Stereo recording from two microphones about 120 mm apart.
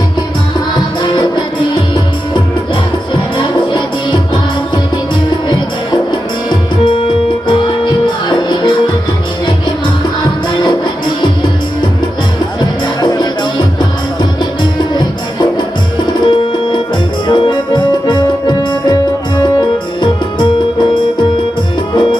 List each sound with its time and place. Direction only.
3.3 s music: 40° left (ahead or behind)
6.5 s music: 45° left (ahead or behind)
12.5 s music: 35° left (ahead or behind)